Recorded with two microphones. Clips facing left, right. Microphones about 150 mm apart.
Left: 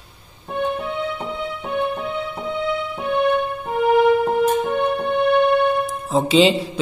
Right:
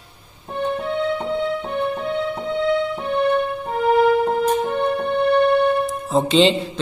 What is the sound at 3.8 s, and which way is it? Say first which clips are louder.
Music: left 1 dB; 5° left (ahead or behind).